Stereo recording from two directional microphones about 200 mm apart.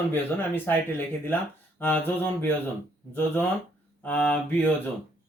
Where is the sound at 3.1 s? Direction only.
10° left (ahead or behind).